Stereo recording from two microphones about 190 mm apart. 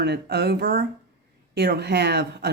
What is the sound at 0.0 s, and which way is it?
Speech, 60° right (ahead or behind).